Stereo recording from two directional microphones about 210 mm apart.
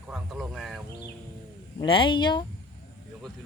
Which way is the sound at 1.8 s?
25° left (ahead or behind).